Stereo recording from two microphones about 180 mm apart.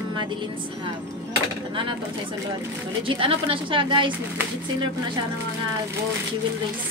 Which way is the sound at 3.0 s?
30° right (ahead or behind).